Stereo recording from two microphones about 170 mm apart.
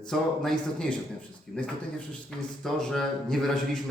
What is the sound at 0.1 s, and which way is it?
A man's voice, 5° left (ahead or behind).